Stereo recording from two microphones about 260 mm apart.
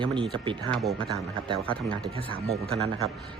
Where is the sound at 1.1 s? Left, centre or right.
Centre.